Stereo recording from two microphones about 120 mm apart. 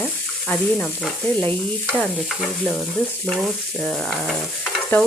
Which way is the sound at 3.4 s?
5° left (ahead or behind).